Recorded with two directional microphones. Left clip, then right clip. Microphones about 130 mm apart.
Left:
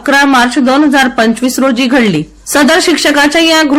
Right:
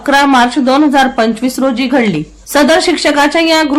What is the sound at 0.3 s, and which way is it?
A woman's voice, 15° left (ahead or behind).